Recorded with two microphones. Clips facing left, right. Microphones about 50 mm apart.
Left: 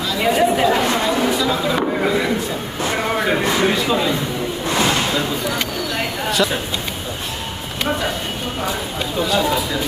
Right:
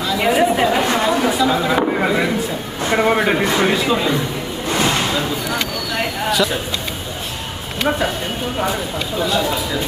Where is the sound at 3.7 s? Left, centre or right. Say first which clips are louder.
Right 1 dB; centre.